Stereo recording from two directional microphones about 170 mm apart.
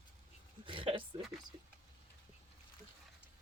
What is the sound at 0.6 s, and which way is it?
Speech, 30° right (ahead or behind).